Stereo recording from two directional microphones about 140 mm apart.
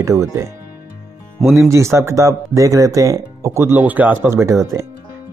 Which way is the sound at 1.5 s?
20° right (ahead or behind).